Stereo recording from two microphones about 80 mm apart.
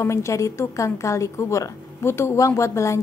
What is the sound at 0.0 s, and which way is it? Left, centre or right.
A woman's voice, left.